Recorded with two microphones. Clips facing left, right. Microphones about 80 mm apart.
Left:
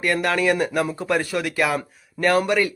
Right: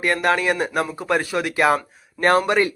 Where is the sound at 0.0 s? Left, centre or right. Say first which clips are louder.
Right 1 dB; right.